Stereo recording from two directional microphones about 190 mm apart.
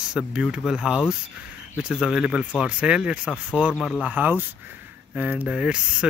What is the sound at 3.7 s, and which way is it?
Speech, 5° left (ahead or behind).